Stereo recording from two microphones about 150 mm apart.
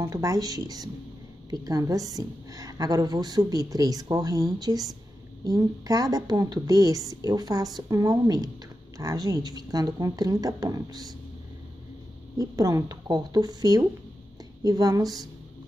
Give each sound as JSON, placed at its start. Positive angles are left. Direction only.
{"t": 0.0, "sound": "a woman's voice", "side_deg": -20}
{"t": 12.4, "sound": "a woman's voice", "side_deg": -25}